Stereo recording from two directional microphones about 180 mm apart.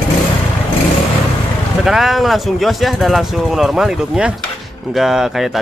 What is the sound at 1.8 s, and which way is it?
Speech, centre (ahead or behind).